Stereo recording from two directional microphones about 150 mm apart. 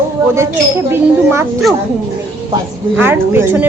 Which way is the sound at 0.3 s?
15° right (ahead or behind).